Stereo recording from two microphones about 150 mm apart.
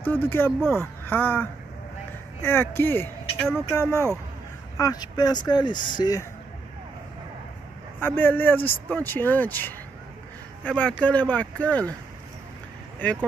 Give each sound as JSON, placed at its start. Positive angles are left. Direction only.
{"t": 0.0, "sound": "speech", "side_deg": 15}
{"t": 8.2, "sound": "speech", "side_deg": 15}
{"t": 13.0, "sound": "speech", "side_deg": 10}